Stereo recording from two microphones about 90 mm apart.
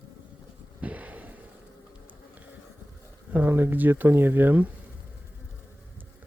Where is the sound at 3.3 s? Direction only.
20° right (ahead or behind).